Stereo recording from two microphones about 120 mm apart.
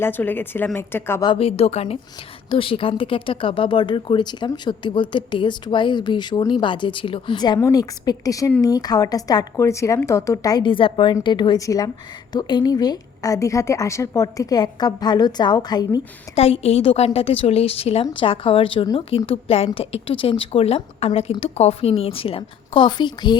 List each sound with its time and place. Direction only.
0.0 s a woman's voice: 15° left (ahead or behind)
1.4 s a woman's voice: 55° left (ahead or behind); by 10.6 s 25° left (ahead or behind)
10.6 s speech: 45° left (ahead or behind)
11.6 s a woman's voice: 30° left (ahead or behind)
16.3 s a woman's voice: 55° left (ahead or behind)
18.0 s a woman's voice: 45° left (ahead or behind)